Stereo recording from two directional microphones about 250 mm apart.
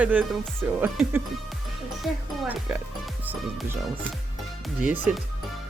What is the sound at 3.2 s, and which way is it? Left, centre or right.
Music, centre.